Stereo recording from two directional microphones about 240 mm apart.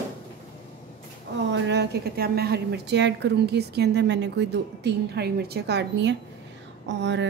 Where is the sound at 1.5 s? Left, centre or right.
Right.